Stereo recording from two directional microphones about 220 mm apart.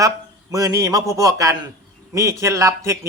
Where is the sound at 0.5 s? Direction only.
15° right (ahead or behind).